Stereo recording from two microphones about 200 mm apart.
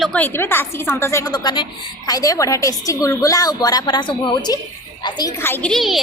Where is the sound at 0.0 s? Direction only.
5° left (ahead or behind).